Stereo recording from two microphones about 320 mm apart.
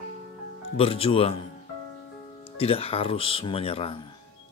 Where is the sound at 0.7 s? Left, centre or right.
Centre.